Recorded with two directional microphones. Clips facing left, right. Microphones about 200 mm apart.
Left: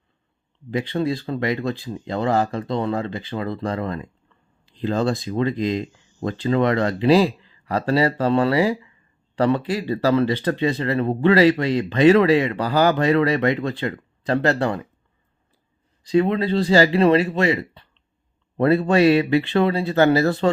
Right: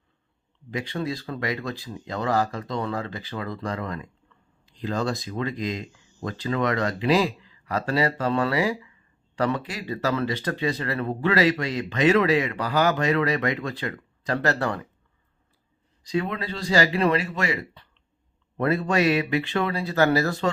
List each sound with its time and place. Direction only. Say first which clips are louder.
0.7 s speech: left 6 dB; 30° left (ahead or behind)
16.0 s speech: left 9 dB; 30° left (ahead or behind)